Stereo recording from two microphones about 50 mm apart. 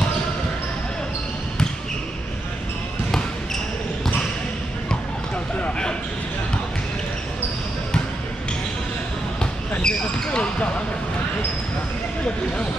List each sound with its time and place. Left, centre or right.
9.4 s basketball bounce: centre